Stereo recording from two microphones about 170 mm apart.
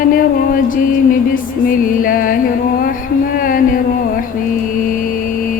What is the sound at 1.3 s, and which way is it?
Music, 55° left (ahead or behind).